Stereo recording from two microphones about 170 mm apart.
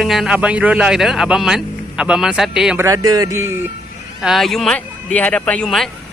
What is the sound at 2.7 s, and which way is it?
Speech, 20° right (ahead or behind).